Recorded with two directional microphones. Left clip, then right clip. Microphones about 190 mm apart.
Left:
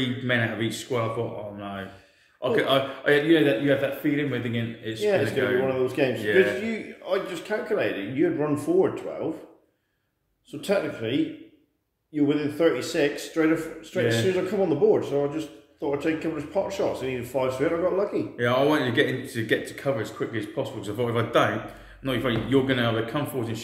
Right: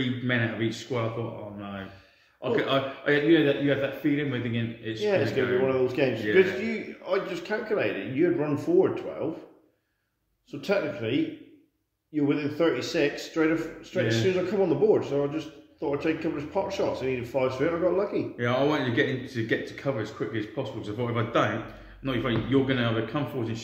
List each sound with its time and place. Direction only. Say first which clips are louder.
0.0 s speech: left 3 dB; 25° left (ahead or behind)
1.6 s a sound: left 4 dB; 25° left (ahead or behind)
2.4 s speech: left 3 dB; 25° left (ahead or behind)
5.7 s a man's voice: left 1 dB; 15° right (ahead or behind)
6.2 s a man's voice: left 1 dB; 30° left (ahead or behind)
6.6 s a man's voice: left 1 dB; 15° right (ahead or behind)
10.5 s a man's voice: left 2 dB; 10° right (ahead or behind)
18.4 s speech: left 4 dB; 25° left (ahead or behind)